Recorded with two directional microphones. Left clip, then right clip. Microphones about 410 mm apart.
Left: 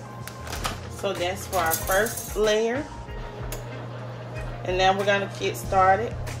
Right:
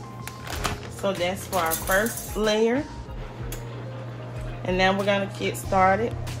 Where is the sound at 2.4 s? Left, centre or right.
Centre.